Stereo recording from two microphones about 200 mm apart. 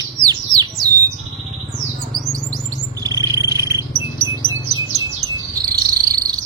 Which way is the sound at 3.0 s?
20° right (ahead or behind).